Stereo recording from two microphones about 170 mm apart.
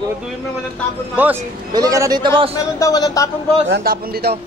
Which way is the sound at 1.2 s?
10° right (ahead or behind).